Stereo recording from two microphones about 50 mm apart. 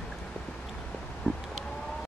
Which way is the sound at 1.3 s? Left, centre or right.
Centre.